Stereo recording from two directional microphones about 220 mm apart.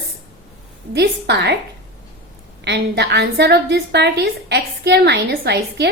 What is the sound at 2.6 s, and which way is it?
A woman's voice, 50° right (ahead or behind).